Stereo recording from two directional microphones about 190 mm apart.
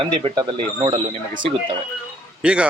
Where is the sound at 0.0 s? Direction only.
30° right (ahead or behind).